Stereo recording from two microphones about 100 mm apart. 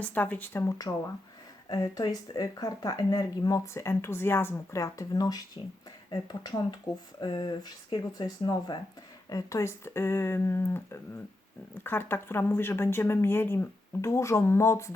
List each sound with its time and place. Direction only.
0.0 s speech: 15° left (ahead or behind)
0.8 s speech: 35° left (ahead or behind)
9.3 s speech: 30° left (ahead or behind)